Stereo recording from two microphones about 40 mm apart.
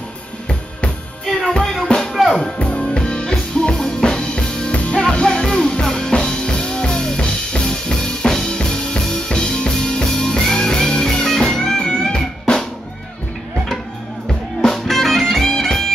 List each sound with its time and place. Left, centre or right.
0.5 s drum kit: left
1.2 s music: centre
2.6 s music: left
14.7 s music: centre